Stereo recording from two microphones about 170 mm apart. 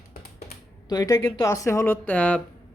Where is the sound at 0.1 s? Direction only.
65° left (ahead or behind).